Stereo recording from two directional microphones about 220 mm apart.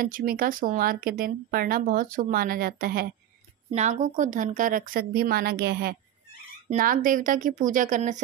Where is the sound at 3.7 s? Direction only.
30° right (ahead or behind).